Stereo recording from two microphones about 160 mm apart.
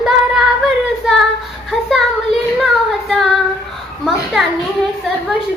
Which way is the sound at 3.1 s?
Centre (ahead or behind).